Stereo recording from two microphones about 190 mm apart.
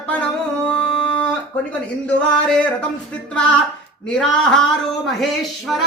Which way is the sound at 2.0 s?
5° left (ahead or behind).